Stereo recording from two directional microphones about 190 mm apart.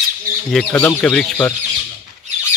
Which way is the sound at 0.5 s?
10° left (ahead or behind).